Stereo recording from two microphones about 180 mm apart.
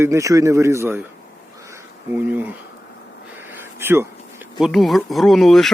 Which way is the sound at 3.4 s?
10° right (ahead or behind).